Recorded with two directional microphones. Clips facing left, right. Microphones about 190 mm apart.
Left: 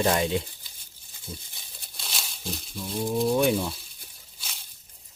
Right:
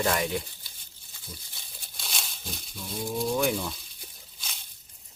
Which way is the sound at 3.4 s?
20° left (ahead or behind).